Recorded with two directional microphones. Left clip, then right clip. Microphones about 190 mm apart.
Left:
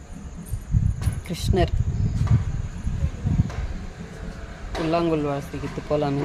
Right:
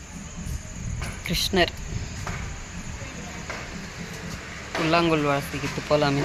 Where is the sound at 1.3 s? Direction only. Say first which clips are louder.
Right 3 dB; 10° left (ahead or behind).